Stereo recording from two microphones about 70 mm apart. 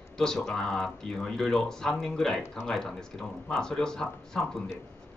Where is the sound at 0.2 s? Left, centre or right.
Centre.